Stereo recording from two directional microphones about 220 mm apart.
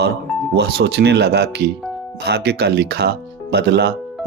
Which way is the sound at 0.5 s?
50° right (ahead or behind).